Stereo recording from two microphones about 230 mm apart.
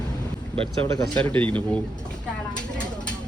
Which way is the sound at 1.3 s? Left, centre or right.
Centre.